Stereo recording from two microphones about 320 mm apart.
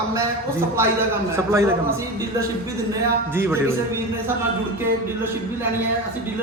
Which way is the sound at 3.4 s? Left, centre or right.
Centre.